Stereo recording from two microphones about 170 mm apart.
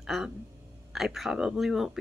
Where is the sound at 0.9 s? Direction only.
Centre (ahead or behind).